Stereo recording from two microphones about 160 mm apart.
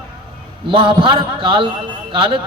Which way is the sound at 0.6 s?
30° right (ahead or behind).